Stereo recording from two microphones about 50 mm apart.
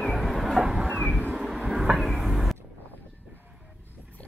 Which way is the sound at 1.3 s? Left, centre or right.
Centre.